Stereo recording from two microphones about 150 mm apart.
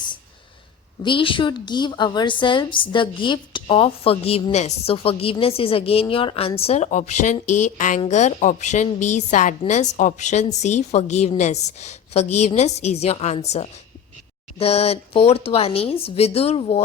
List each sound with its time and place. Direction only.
1.0 s a woman's voice: 35° left (ahead or behind)